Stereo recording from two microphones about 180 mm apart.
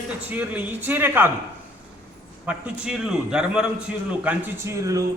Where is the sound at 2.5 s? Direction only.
5° right (ahead or behind).